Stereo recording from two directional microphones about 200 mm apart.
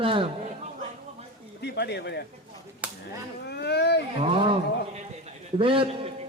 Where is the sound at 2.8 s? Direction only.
5° right (ahead or behind).